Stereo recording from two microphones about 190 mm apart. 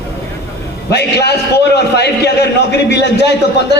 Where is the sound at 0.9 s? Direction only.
60° left (ahead or behind).